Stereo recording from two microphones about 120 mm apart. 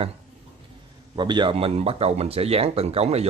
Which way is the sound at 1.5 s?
55° right (ahead or behind).